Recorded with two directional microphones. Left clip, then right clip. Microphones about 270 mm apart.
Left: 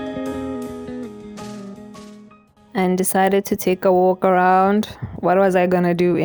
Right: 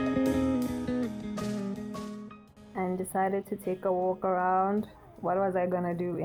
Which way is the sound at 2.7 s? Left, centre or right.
Left.